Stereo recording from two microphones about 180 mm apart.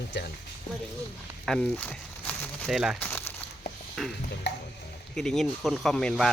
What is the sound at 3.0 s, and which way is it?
Speech, 10° left (ahead or behind).